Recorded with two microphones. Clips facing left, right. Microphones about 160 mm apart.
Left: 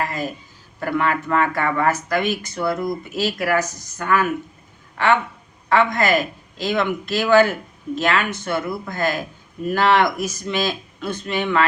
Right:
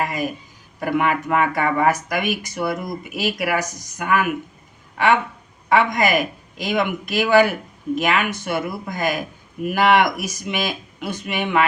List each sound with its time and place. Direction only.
0.0 s speech: 15° right (ahead or behind)
5.6 s speech: 15° right (ahead or behind)